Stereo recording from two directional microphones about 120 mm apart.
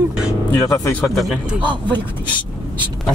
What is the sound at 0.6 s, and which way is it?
Speech, 25° left (ahead or behind).